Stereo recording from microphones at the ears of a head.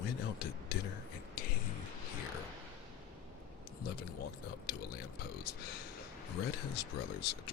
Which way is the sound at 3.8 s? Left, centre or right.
Left.